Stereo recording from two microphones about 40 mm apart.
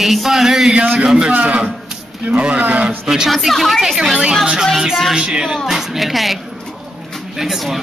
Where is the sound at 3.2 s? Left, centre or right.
Centre.